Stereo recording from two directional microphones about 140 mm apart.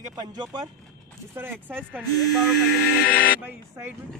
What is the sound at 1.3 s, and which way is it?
Speech, 15° right (ahead or behind).